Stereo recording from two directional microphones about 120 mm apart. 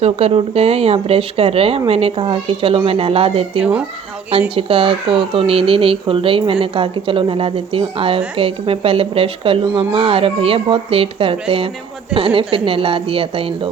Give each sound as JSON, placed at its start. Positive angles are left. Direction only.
{"t": 0.0, "sound": "speech", "side_deg": -60}
{"t": 3.6, "sound": "speech", "side_deg": -10}
{"t": 4.5, "sound": "speech", "side_deg": -50}